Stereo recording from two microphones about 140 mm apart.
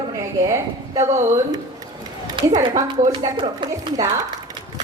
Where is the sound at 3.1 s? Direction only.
35° right (ahead or behind).